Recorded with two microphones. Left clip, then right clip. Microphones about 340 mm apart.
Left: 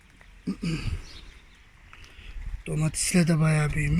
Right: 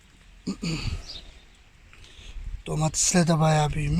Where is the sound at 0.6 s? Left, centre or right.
Right.